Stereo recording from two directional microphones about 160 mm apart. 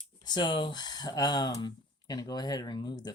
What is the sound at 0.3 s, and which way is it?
Speech, 30° left (ahead or behind).